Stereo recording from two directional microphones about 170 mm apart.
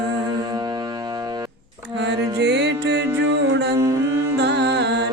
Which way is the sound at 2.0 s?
90° right.